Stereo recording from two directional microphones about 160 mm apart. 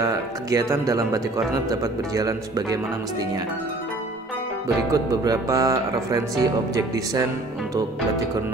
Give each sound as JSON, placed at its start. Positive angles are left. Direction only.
{"t": 0.0, "sound": "speech", "side_deg": -20}
{"t": 4.9, "sound": "speech", "side_deg": -25}